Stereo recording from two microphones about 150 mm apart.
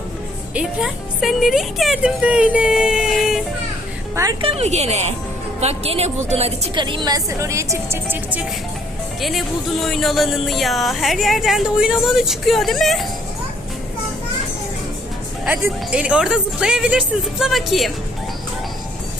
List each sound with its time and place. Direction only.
0.5 s speech: 5° right (ahead or behind)
4.1 s speech: 20° right (ahead or behind)
4.4 s a woman's voice: 40° right (ahead or behind)
6.7 s speech: 30° right (ahead or behind); by 8.4 s 10° right (ahead or behind)
9.2 s speech: centre (ahead or behind)
15.6 s speech: 5° right (ahead or behind)